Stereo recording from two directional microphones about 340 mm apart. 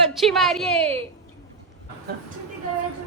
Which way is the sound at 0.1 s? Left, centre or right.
Centre.